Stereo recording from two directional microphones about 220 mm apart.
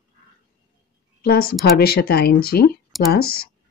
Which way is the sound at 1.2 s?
45° left (ahead or behind).